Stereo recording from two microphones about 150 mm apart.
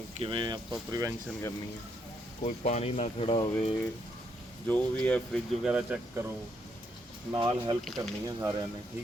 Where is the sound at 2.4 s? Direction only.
50° left (ahead or behind).